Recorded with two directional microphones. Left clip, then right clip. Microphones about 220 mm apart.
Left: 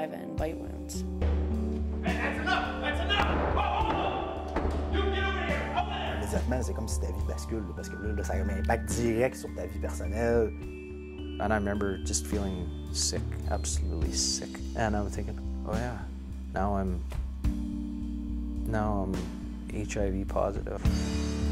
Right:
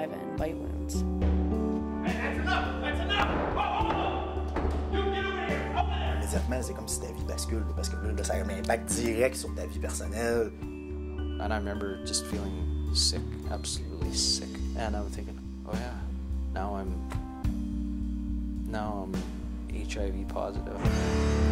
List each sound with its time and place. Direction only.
0.0 s music: centre (ahead or behind)
8.2 s speech: 40° left (ahead or behind)
11.3 s speech: 25° left (ahead or behind)
16.5 s speech: 25° left (ahead or behind)
18.7 s speech: 25° left (ahead or behind)
20.7 s speech: centre (ahead or behind)